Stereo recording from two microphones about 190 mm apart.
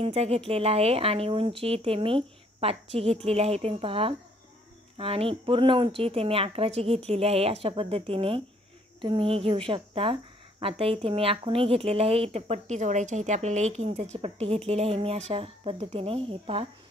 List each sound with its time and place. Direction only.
0.0 s speech: 30° right (ahead or behind)